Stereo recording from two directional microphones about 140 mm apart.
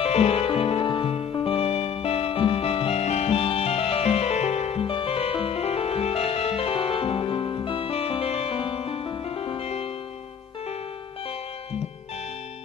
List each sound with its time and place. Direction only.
0.0 s music: 45° left (ahead or behind)